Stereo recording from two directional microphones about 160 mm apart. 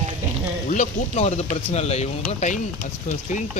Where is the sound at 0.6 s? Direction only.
50° left (ahead or behind).